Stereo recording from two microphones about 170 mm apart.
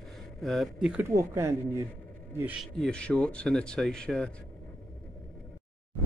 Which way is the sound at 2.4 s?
Centre (ahead or behind).